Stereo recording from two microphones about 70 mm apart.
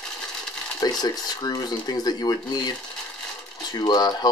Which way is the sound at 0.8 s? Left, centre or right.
Left.